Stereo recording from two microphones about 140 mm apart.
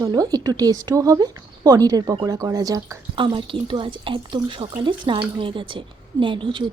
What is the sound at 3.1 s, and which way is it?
Speech, 35° right (ahead or behind).